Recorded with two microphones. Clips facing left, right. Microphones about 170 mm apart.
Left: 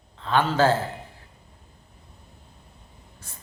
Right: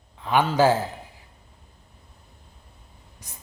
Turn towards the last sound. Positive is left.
turn(degrees=-15)  # may be behind; listen again after turning